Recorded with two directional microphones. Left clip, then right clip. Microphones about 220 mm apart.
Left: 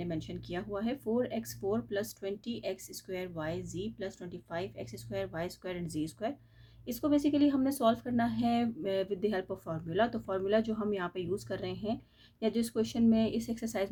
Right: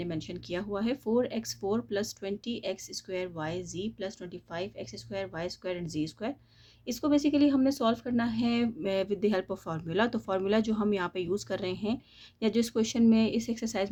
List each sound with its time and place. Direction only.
0.0 s speech: 25° right (ahead or behind)